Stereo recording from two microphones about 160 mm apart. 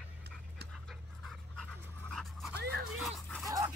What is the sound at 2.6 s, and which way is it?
Dog, 90° right.